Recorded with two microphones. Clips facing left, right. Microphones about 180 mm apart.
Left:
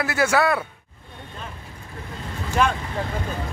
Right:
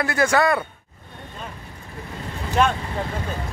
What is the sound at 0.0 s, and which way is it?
Speech, 5° left (ahead or behind).